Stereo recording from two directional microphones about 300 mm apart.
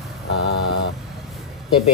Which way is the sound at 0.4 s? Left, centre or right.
Left.